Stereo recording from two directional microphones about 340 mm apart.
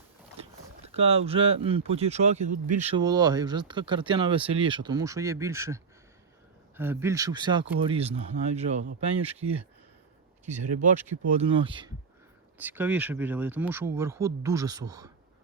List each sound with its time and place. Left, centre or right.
0.3 s boat: centre
1.6 s speech: centre
10.8 s speech: right